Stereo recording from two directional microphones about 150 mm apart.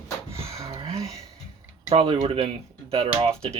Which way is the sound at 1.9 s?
40° right (ahead or behind).